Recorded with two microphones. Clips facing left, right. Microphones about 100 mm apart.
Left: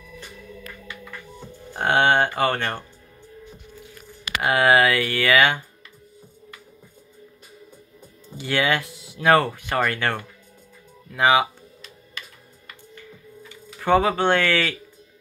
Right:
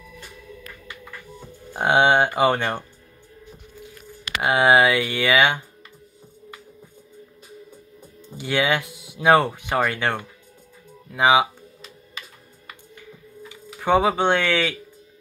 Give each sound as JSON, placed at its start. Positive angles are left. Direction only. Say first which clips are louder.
{"t": 1.7, "sound": "speech", "louder": "right 2 dB", "side_deg": -15}
{"t": 4.4, "sound": "speech", "louder": "right 1 dB", "side_deg": -10}
{"t": 8.4, "sound": "speech", "louder": "right 1 dB", "side_deg": -10}
{"t": 12.6, "sound": "computer keyboard", "louder": "even", "side_deg": -10}